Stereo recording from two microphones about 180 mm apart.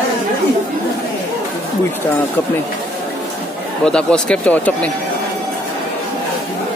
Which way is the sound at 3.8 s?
5° left (ahead or behind).